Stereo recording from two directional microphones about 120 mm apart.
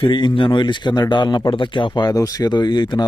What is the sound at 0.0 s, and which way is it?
Speech, 40° left (ahead or behind).